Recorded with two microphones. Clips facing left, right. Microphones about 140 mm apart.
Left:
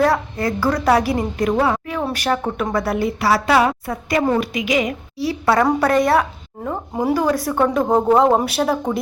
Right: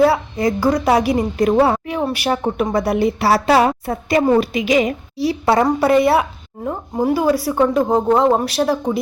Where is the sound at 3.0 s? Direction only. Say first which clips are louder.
Right 2 dB; 25° right (ahead or behind).